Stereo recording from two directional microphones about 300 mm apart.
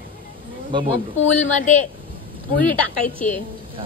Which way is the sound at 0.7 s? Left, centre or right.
Centre.